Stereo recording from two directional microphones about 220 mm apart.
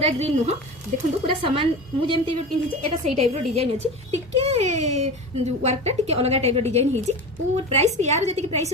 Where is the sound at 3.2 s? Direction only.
30° right (ahead or behind).